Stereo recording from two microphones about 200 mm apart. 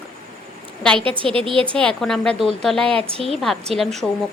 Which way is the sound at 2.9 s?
30° right (ahead or behind).